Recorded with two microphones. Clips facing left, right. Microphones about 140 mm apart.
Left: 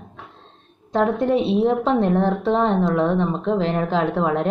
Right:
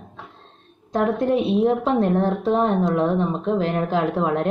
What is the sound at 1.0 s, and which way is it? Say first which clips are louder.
Speech: left 1 dB; 25° left (ahead or behind).